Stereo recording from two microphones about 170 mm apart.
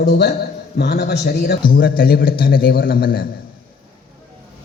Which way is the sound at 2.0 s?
60° left (ahead or behind).